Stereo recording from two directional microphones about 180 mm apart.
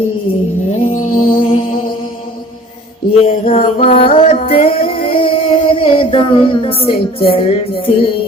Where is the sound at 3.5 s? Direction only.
35° left (ahead or behind).